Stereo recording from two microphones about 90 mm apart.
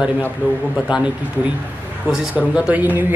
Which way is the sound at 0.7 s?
10° right (ahead or behind).